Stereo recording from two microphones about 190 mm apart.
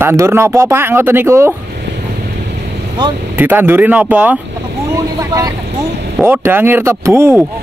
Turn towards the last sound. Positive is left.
turn(degrees=-15)  # may be behind; listen again after turning